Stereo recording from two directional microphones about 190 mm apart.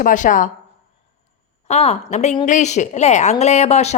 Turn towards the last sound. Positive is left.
turn(degrees=35)  # may be behind; listen again after turning